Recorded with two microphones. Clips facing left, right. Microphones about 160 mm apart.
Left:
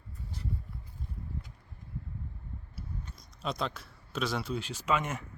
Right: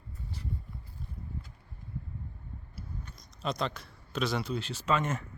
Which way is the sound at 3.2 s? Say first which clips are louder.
Right 2 dB; 5° left (ahead or behind).